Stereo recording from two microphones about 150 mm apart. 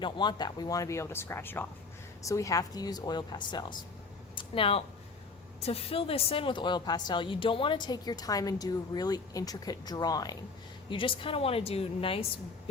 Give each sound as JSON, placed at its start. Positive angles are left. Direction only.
{"t": 0.0, "sound": "a woman's voice", "side_deg": 30}
{"t": 4.4, "sound": "a sound", "side_deg": 35}
{"t": 5.5, "sound": "a woman's voice", "side_deg": 40}
{"t": 10.8, "sound": "speech", "side_deg": 35}